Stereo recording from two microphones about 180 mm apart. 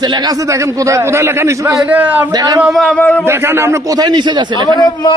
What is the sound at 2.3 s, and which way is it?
Speech, 20° right (ahead or behind).